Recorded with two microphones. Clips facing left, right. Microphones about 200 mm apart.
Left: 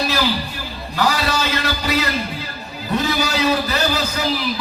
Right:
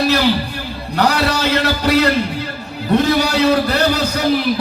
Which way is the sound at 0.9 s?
65° right (ahead or behind).